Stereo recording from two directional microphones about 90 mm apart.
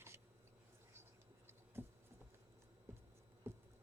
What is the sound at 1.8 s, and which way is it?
Patter, 25° right (ahead or behind).